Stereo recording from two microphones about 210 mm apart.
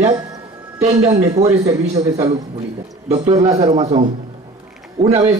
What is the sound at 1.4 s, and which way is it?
Speech, 30° right (ahead or behind).